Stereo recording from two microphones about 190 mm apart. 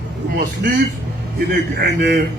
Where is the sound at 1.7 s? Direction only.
55° right (ahead or behind).